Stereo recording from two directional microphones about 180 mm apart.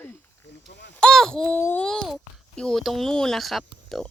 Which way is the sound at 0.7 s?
75° left (ahead or behind).